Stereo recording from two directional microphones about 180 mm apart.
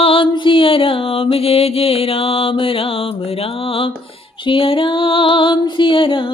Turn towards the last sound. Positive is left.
turn(degrees=30)  # may be behind; listen again after turning